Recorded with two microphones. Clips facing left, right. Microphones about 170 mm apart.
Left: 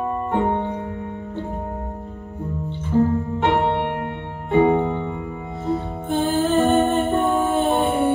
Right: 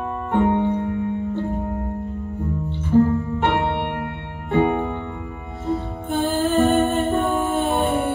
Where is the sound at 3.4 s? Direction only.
20° left (ahead or behind).